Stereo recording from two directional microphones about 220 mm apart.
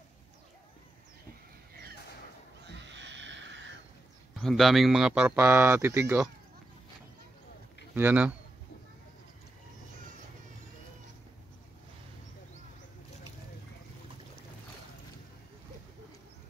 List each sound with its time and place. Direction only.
2.6 s wild animals: 55° right (ahead or behind)
4.4 s speech: centre (ahead or behind)
7.9 s speech: 10° right (ahead or behind)